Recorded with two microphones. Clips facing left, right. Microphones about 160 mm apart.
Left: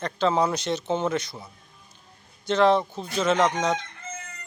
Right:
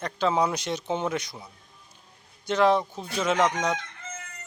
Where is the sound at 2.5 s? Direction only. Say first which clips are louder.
Left 2 dB; 10° right (ahead or behind).